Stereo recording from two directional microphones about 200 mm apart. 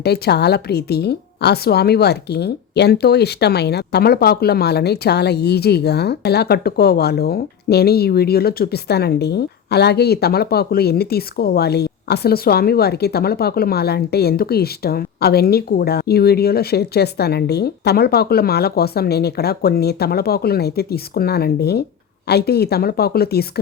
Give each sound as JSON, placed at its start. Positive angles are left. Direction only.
{"t": 0.0, "sound": "a woman's voice", "side_deg": 55}